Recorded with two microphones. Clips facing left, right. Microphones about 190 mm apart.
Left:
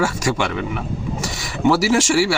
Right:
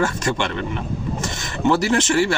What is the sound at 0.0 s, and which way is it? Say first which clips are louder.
Speech: left 1 dB; 10° left (ahead or behind).